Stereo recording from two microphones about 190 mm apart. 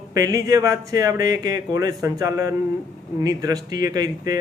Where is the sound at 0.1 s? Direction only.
20° right (ahead or behind).